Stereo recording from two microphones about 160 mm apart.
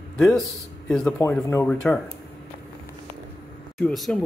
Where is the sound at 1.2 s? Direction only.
15° left (ahead or behind).